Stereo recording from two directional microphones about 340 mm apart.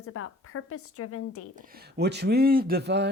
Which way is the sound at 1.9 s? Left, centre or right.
Right.